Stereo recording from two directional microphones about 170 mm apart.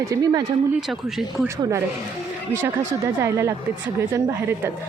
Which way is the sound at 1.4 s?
15° right (ahead or behind).